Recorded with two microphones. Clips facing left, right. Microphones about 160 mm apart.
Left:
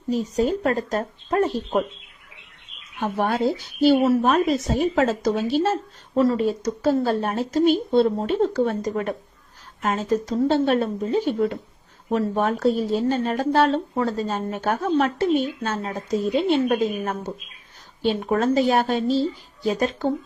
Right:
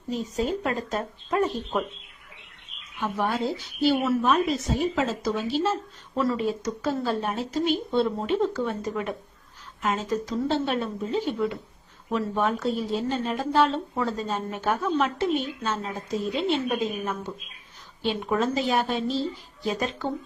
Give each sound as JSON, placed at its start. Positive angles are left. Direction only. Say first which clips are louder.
{"t": 0.1, "sound": "speech", "louder": "left 5 dB", "side_deg": 35}
{"t": 3.0, "sound": "a woman's voice", "louder": "left 5 dB", "side_deg": 45}